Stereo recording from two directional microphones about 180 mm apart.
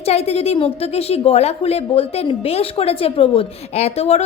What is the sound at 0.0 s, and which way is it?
A woman's voice, 35° left (ahead or behind).